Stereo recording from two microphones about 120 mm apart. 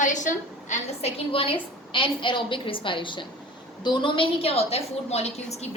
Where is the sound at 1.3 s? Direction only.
50° left (ahead or behind).